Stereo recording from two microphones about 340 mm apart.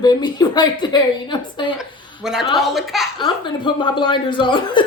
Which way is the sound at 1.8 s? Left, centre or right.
Centre.